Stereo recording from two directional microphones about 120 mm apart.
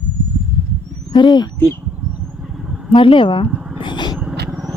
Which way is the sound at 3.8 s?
40° left (ahead or behind).